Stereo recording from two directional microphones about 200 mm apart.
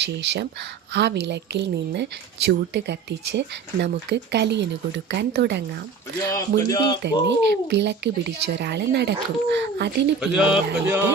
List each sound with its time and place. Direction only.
0.0 s speech: 60° right (ahead or behind)
6.3 s speech: 20° left (ahead or behind)
7.0 s speech: 60° right (ahead or behind)
10.2 s speech: 5° right (ahead or behind)